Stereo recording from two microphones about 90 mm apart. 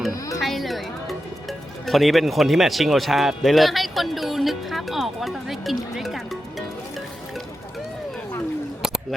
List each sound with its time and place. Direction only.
0.4 s music: centre (ahead or behind)